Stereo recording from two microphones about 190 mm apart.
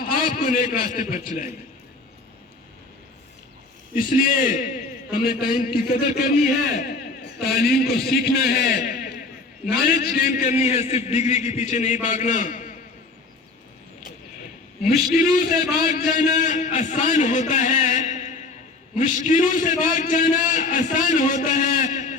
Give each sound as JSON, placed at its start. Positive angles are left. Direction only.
{"t": 0.0, "sound": "a man's voice", "side_deg": 50}
{"t": 3.9, "sound": "a man's voice", "side_deg": 45}
{"t": 14.8, "sound": "a man's voice", "side_deg": 50}